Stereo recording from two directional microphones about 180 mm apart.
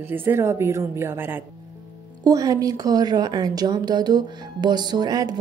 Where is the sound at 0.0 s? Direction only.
10° right (ahead or behind).